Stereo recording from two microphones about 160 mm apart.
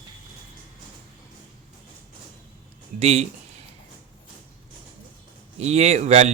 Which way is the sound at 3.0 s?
45° right (ahead or behind).